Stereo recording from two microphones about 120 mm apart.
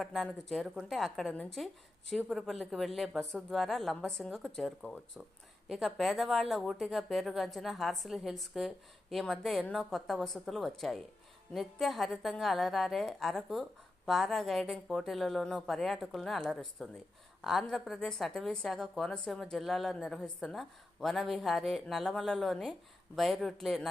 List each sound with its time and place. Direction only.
0.0 s a woman's voice: centre (ahead or behind)